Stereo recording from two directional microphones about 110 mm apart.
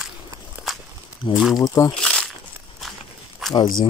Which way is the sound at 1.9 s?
5° left (ahead or behind).